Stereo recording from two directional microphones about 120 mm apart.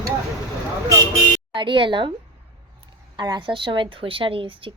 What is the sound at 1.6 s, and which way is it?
Speech, 45° right (ahead or behind).